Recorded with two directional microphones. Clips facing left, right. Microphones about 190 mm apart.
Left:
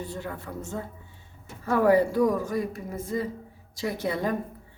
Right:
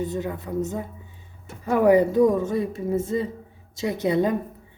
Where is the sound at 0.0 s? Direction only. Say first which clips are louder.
Right 7 dB; 20° right (ahead or behind).